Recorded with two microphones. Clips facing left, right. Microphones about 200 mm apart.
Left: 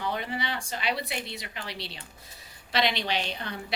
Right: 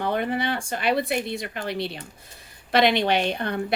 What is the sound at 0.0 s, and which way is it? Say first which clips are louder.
A woman's voice: right 7 dB; 55° right (ahead or behind).